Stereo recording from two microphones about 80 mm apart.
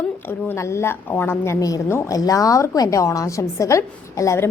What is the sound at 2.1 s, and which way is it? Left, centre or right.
A woman's voice, left.